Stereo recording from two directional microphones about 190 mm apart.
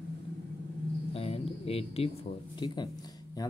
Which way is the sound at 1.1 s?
30° left (ahead or behind).